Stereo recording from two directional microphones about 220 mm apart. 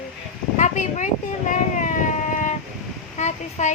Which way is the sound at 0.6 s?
35° left (ahead or behind).